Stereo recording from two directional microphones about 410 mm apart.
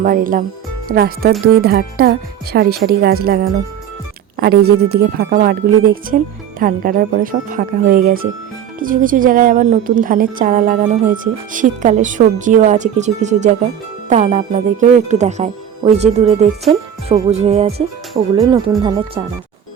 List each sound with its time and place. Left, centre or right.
0.0 s a woman's voice: centre
18.1 s speech: centre